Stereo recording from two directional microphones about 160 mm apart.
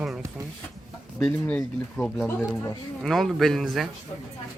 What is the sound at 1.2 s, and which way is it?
A man's voice, 5° left (ahead or behind).